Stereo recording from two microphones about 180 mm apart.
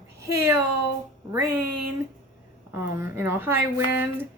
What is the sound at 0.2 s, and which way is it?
Speech, 15° right (ahead or behind).